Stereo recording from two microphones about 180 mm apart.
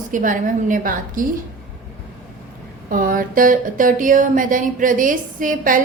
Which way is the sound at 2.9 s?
50° right (ahead or behind).